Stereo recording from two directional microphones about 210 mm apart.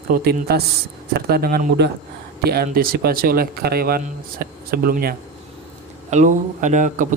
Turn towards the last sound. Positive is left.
turn(degrees=-40)  # may be behind; listen again after turning